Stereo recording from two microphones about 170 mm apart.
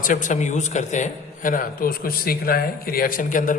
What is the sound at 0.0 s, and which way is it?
A man's voice, 50° left (ahead or behind).